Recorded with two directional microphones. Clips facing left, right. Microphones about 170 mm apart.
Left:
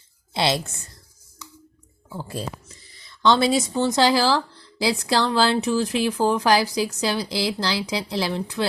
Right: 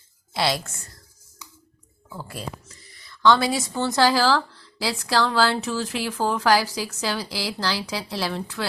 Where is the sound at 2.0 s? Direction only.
25° left (ahead or behind).